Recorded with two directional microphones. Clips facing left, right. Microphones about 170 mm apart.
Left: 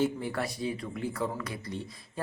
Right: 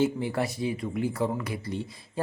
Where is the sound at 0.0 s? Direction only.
25° right (ahead or behind).